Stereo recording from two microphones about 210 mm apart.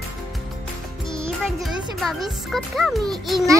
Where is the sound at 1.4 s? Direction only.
Centre (ahead or behind).